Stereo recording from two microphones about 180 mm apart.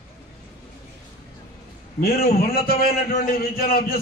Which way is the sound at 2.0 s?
60° left (ahead or behind).